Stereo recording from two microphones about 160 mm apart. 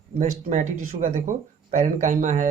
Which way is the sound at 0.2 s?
55° right (ahead or behind).